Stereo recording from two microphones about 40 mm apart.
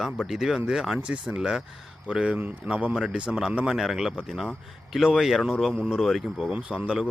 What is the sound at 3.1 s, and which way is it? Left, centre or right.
Speech, right.